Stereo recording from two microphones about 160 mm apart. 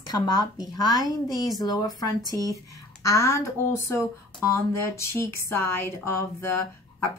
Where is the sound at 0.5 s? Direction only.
25° left (ahead or behind).